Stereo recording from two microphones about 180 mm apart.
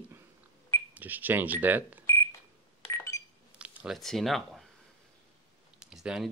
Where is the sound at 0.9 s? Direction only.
10° right (ahead or behind).